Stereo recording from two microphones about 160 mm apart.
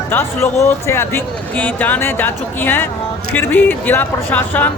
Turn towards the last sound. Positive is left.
turn(degrees=10)  # may be behind; listen again after turning